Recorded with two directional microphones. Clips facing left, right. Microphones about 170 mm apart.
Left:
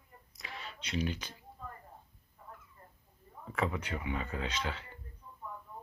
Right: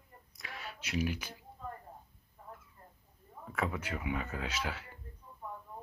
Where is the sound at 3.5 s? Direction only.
5° right (ahead or behind).